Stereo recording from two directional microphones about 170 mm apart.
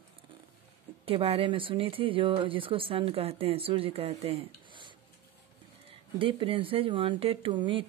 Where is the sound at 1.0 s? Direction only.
35° right (ahead or behind).